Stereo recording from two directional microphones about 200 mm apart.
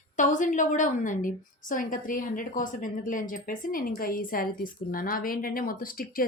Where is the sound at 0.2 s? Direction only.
40° left (ahead or behind).